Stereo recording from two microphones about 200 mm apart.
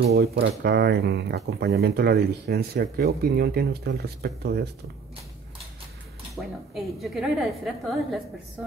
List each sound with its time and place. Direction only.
0.1 s speech: 55° right (ahead or behind)
6.3 s a woman's voice: centre (ahead or behind)